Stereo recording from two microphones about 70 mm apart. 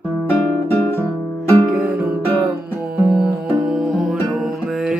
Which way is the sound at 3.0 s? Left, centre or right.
Centre.